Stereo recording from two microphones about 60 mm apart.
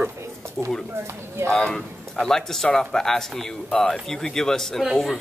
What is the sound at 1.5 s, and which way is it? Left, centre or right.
Speech, centre.